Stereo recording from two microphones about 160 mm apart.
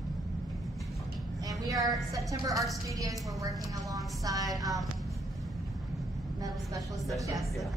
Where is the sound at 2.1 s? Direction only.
20° right (ahead or behind).